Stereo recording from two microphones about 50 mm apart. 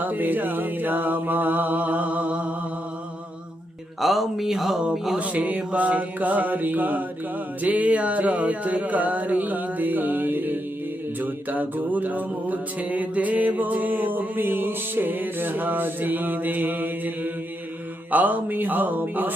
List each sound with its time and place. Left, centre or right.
0.0 s music: right
4.0 s speech: centre
5.1 s music: right